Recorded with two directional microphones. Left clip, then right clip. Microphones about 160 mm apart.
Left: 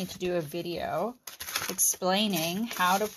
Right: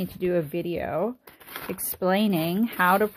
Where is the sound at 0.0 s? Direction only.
40° right (ahead or behind).